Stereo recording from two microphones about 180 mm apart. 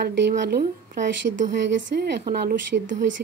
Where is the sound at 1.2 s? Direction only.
35° right (ahead or behind).